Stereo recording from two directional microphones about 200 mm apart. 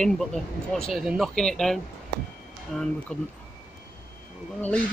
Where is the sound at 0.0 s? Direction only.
Centre (ahead or behind).